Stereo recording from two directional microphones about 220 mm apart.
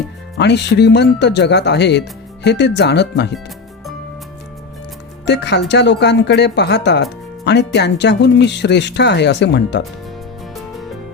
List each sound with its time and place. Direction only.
0.3 s speech: 50° left (ahead or behind)
5.2 s speech: 50° left (ahead or behind)